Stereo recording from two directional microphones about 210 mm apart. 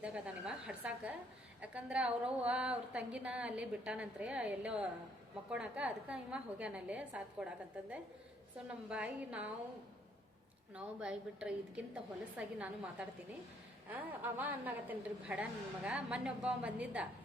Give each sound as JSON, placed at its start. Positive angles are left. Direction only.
{"t": 0.0, "sound": "a woman's voice", "side_deg": -5}
{"t": 8.9, "sound": "a woman's voice", "side_deg": -5}
{"t": 10.8, "sound": "a woman's voice", "side_deg": -5}